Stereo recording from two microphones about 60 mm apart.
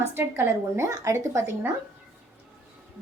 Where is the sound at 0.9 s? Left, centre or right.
Right.